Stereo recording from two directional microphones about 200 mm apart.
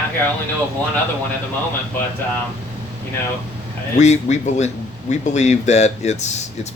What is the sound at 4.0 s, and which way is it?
Speech, 35° left (ahead or behind).